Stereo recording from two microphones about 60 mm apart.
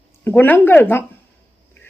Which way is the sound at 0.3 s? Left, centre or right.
Left.